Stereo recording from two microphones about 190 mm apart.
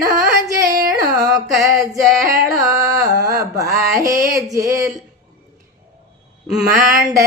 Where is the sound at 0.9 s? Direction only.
20° right (ahead or behind).